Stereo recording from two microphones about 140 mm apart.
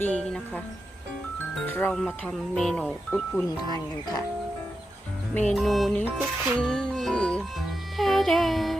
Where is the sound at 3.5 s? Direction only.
30° left (ahead or behind).